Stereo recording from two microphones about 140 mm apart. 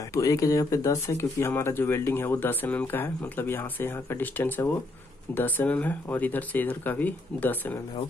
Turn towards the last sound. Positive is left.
turn(degrees=15)  # may be behind; listen again after turning